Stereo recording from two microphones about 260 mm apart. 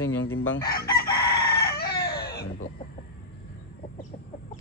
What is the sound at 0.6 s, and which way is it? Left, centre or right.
Chicken, left.